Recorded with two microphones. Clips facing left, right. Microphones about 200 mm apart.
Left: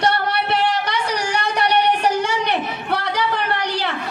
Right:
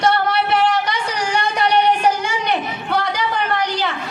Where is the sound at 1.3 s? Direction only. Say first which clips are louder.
Right 2 dB; 65° left (ahead or behind).